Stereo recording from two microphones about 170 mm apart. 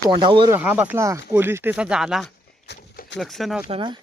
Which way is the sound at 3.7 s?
30° right (ahead or behind).